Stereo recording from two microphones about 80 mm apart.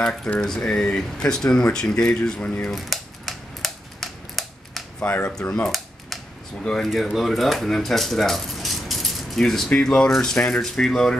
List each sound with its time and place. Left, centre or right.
0.4 s speech: centre
2.7 s typewriter: centre
5.0 s speech: left
5.5 s cap gun: centre
6.6 s speech: centre